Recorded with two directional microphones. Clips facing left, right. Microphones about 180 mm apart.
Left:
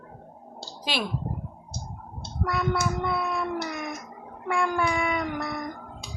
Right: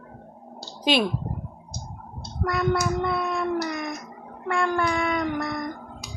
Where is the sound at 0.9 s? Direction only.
20° right (ahead or behind).